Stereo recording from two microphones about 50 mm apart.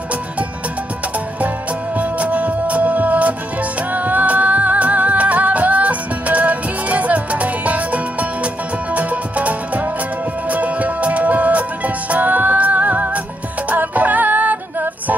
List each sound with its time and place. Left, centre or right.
2.0 s music: right